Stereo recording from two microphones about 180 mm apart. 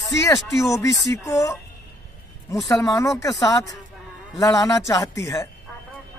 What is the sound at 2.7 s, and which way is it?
Speech, 20° left (ahead or behind).